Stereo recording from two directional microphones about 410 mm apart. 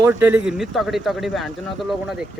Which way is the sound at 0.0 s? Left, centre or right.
Centre.